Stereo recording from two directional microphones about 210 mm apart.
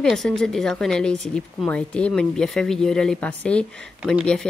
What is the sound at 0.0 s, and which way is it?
Speech, centre (ahead or behind).